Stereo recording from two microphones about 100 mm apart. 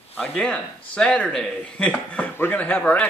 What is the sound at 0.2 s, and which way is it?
Speech, 5° left (ahead or behind).